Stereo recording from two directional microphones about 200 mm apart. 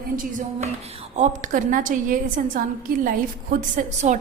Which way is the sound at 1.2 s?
40° right (ahead or behind).